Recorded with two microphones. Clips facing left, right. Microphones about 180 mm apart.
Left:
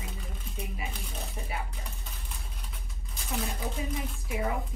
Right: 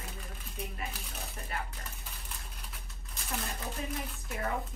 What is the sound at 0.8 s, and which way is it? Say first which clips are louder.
Speech: left 3 dB; 5° left (ahead or behind).